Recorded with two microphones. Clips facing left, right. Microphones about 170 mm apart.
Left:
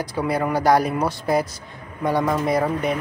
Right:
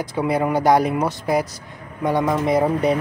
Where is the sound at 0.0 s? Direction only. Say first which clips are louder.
Right 2 dB; 20° right (ahead or behind).